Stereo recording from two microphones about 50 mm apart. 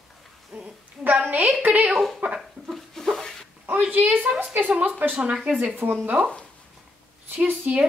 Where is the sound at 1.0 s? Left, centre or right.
Right.